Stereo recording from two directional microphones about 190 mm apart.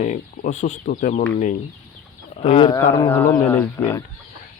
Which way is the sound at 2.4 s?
25° left (ahead or behind).